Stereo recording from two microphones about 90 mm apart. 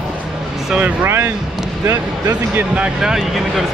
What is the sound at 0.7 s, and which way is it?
Speech, 15° right (ahead or behind).